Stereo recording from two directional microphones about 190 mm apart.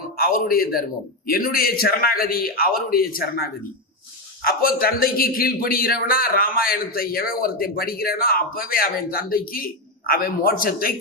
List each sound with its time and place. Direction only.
0.2 s a man's voice: 50° left (ahead or behind)